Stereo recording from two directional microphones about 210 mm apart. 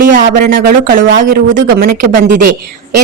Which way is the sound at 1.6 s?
40° right (ahead or behind).